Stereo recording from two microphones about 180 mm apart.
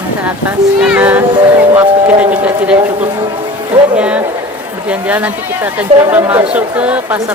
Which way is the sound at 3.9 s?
5° right (ahead or behind).